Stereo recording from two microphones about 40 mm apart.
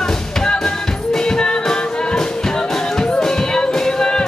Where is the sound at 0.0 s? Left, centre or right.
Centre.